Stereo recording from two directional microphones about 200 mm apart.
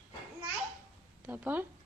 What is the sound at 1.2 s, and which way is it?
Speech, 10° right (ahead or behind).